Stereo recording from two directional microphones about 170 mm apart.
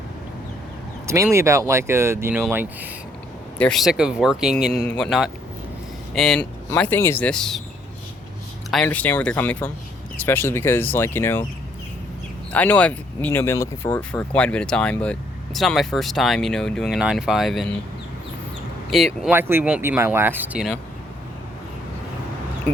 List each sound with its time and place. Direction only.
1.0 s speech: 15° right (ahead or behind)
3.6 s speech: centre (ahead or behind)
8.7 s speech: 10° left (ahead or behind)
12.5 s speech: 10° left (ahead or behind)
18.9 s speech: centre (ahead or behind)
19.3 s speech: 15° right (ahead or behind)